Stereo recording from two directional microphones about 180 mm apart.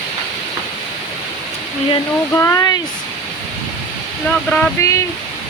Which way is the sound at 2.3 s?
15° left (ahead or behind).